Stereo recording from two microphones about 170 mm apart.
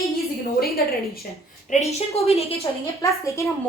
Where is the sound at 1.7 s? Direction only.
40° left (ahead or behind).